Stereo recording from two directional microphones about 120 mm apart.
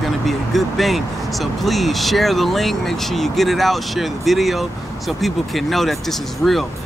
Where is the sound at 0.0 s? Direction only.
Centre (ahead or behind).